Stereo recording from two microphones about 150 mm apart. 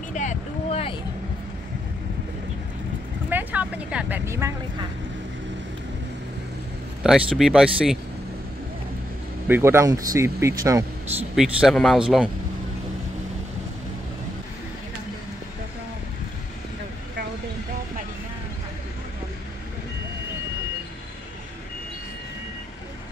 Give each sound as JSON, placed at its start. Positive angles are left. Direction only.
{"t": 0.1, "sound": "vehicle", "side_deg": 55}
{"t": 3.3, "sound": "vehicle", "side_deg": -10}
{"t": 7.0, "sound": "speech", "side_deg": -5}
{"t": 9.5, "sound": "speech", "side_deg": -15}
{"t": 11.3, "sound": "speech", "side_deg": -5}